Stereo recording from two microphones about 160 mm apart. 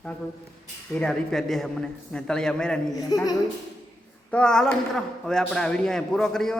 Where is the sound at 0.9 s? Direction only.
5° left (ahead or behind).